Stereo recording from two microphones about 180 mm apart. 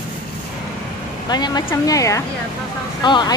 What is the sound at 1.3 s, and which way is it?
A woman's voice, 25° left (ahead or behind).